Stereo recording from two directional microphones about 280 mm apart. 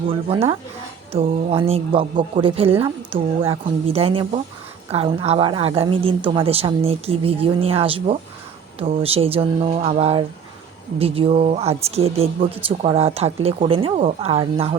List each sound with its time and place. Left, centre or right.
0.1 s speech: centre